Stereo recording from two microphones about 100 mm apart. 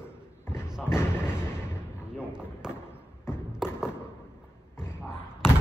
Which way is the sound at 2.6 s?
5° right (ahead or behind).